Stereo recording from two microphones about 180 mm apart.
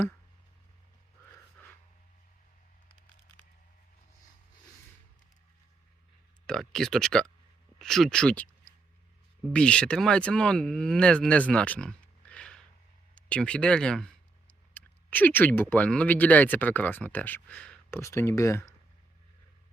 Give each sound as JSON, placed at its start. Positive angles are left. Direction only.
{"t": 6.5, "sound": "speech", "side_deg": 0}
{"t": 13.1, "sound": "a sound", "side_deg": 5}
{"t": 15.7, "sound": "speech", "side_deg": 5}